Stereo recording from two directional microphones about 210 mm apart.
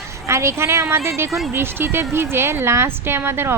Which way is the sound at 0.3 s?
15° right (ahead or behind).